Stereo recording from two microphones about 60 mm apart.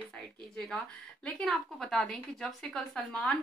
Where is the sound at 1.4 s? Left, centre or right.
Centre.